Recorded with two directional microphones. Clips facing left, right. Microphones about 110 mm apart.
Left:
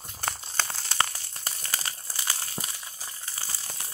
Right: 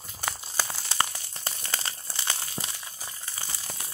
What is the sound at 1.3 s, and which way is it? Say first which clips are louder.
Crumpling: right 1 dB; 25° right (ahead or behind).